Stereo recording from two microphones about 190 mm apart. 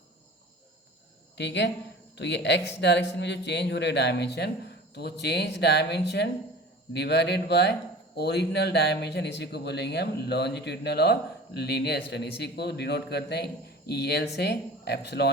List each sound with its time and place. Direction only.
1.4 s speech: 65° left (ahead or behind)